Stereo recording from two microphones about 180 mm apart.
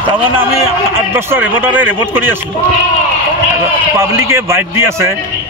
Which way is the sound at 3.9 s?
15° right (ahead or behind).